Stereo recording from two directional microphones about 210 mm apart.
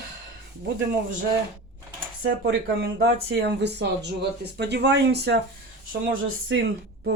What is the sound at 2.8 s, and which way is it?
Speech, 50° right (ahead or behind).